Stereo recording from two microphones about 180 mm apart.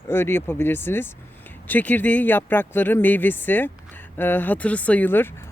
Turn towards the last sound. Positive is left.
turn(degrees=15)  # may be behind; listen again after turning